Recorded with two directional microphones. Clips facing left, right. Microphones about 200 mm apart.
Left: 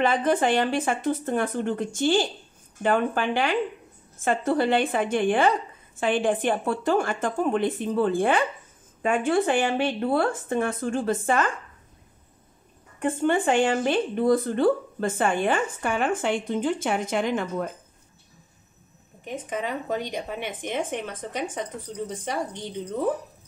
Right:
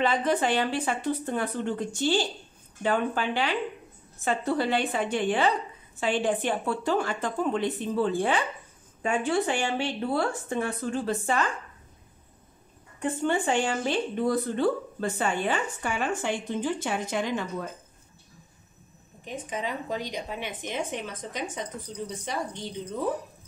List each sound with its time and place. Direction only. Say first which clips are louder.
0.0 s speech: left 3 dB; 50° left (ahead or behind)
13.0 s speech: left 4 dB; 55° left (ahead or behind)
19.2 s speech: left 3 dB; 55° left (ahead or behind)